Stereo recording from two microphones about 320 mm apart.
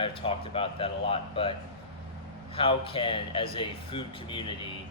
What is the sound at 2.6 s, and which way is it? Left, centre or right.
Speech, centre.